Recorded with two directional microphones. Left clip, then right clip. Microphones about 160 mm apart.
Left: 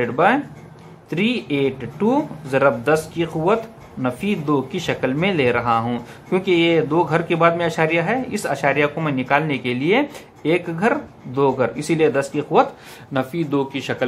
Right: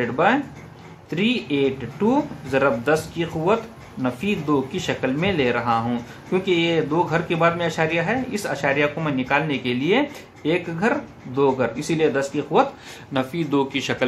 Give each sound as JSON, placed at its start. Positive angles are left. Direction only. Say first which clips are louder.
{"t": 0.0, "sound": "speech", "louder": "left 2 dB", "side_deg": 25}